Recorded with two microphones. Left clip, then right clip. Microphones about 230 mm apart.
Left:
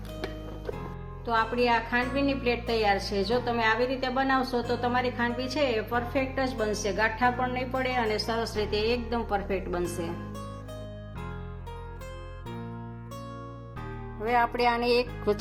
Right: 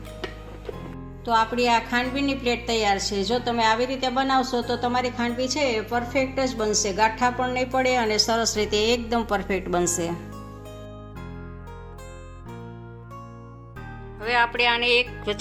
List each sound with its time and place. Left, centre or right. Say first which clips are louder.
1.2 s a woman's voice: right 4 dB; right
14.2 s speech: right 4 dB; left